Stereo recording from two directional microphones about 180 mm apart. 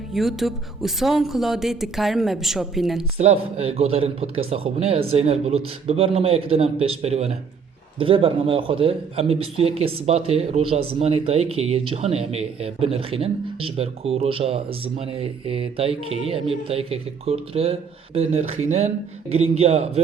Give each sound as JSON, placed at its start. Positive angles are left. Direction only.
{"t": 0.1, "sound": "speech", "side_deg": 0}
{"t": 3.2, "sound": "a man's voice", "side_deg": -35}